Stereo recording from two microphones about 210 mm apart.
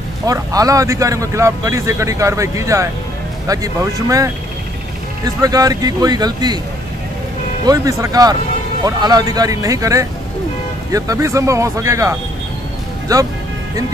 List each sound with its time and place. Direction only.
0.3 s speech: 15° right (ahead or behind)
7.6 s speech: 15° right (ahead or behind)